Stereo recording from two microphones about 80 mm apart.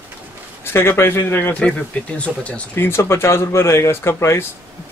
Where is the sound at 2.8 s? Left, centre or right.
Left.